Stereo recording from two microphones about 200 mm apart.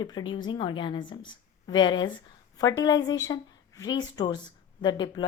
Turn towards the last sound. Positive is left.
turn(degrees=20)  # may be behind; listen again after turning